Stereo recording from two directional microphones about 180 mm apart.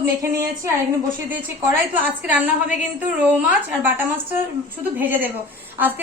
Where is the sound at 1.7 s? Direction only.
10° right (ahead or behind).